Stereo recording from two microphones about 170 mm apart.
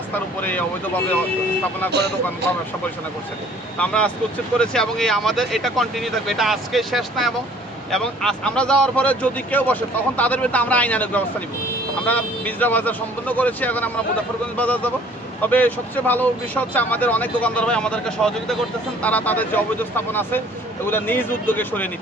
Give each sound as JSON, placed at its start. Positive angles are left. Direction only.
{"t": 1.9, "sound": "speech", "side_deg": -75}
{"t": 3.8, "sound": "speech", "side_deg": 5}